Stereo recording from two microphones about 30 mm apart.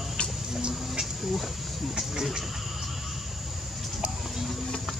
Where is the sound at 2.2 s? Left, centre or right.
Centre.